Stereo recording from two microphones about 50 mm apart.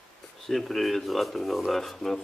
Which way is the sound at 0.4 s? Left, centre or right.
Centre.